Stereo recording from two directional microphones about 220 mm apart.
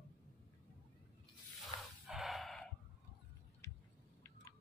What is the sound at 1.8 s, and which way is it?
Snort, centre (ahead or behind).